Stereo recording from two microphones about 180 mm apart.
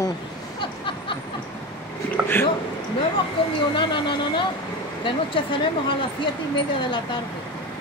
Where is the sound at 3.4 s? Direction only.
30° left (ahead or behind).